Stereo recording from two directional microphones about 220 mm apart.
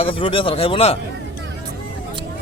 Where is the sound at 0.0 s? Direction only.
25° left (ahead or behind).